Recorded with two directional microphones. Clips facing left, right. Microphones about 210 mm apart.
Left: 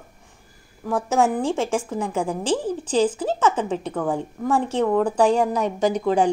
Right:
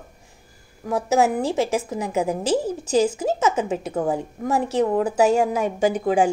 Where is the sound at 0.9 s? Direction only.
10° right (ahead or behind).